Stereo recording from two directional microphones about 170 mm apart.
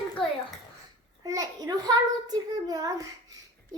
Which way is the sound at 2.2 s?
20° right (ahead or behind).